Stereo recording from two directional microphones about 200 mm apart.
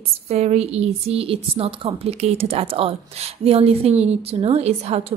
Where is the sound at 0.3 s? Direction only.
30° right (ahead or behind).